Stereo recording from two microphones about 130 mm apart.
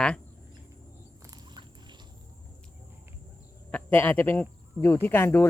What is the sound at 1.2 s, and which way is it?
Dog, 30° right (ahead or behind).